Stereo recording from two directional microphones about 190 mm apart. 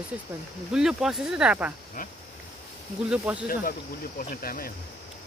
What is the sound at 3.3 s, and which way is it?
Speech, 5° right (ahead or behind).